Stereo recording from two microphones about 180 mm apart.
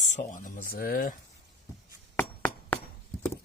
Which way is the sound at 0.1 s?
45° left (ahead or behind).